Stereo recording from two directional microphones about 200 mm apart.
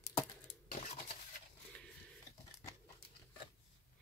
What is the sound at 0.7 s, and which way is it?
Dishes, 35° left (ahead or behind).